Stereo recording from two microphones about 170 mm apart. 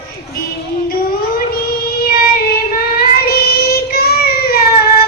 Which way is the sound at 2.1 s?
60° left (ahead or behind).